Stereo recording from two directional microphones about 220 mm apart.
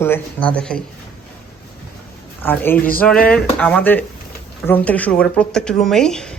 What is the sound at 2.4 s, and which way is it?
Speech, 10° left (ahead or behind).